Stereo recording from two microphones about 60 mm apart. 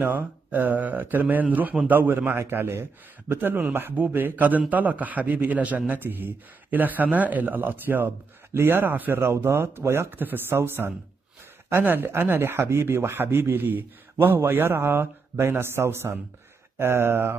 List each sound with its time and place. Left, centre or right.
0.0 s a man's voice: right